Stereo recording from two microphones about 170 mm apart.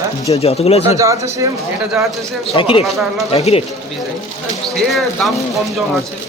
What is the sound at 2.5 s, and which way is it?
Speech, 30° left (ahead or behind).